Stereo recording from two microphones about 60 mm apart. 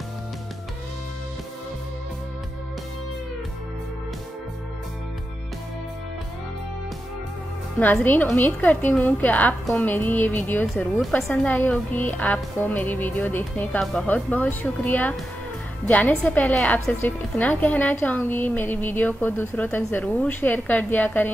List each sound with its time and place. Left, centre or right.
8.0 s a woman's voice: left
11.0 s a woman's voice: centre
11.4 s a woman's voice: left